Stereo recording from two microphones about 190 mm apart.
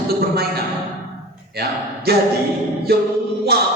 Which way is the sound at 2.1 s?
55° right (ahead or behind).